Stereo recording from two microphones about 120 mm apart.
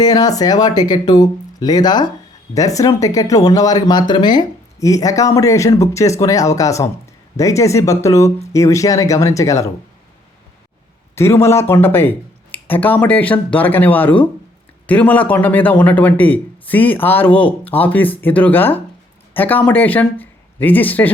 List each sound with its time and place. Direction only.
0.0 s speech: 35° left (ahead or behind)
11.1 s a man's voice: 20° left (ahead or behind)